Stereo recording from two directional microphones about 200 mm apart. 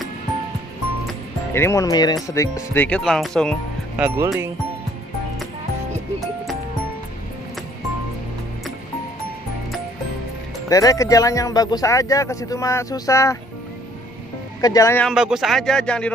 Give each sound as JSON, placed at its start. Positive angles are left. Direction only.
{"t": 1.5, "sound": "speech", "side_deg": 15}
{"t": 10.7, "sound": "speech", "side_deg": 15}
{"t": 14.6, "sound": "speech", "side_deg": 15}
{"t": 15.0, "sound": "speech", "side_deg": -5}